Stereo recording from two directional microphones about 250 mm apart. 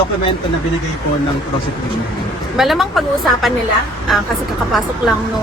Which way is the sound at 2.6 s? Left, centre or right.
Centre.